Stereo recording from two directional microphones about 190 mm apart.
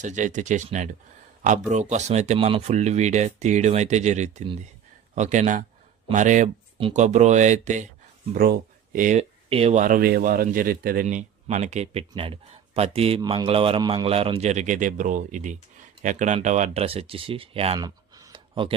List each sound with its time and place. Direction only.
0.0 s speech: 40° right (ahead or behind)
8.3 s speech: 50° right (ahead or behind); by 18.8 s 25° right (ahead or behind)